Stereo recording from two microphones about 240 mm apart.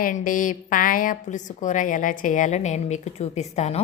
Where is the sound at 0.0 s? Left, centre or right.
Left.